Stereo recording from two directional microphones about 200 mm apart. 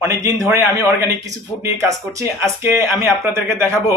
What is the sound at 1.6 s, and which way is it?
Speech, 15° right (ahead or behind).